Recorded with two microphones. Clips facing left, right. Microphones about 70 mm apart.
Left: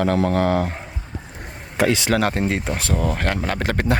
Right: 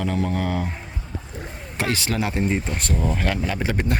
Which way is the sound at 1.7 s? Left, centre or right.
Left.